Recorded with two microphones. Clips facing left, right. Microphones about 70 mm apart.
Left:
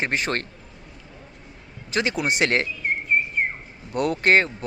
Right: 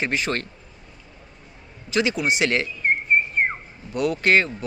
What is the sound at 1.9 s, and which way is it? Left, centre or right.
Speech, left.